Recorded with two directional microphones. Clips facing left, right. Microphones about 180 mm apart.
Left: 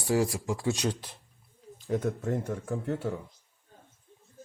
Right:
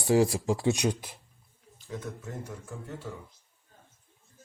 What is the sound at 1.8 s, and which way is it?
Speech, 55° left (ahead or behind).